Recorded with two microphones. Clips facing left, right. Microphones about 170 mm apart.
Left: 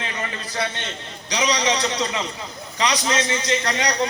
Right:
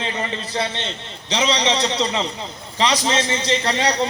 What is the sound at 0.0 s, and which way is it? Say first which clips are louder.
A man's voice: right 4 dB; 25° right (ahead or behind).